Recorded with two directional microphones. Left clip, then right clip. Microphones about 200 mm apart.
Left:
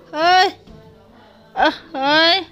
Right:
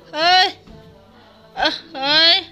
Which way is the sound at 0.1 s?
50° left (ahead or behind).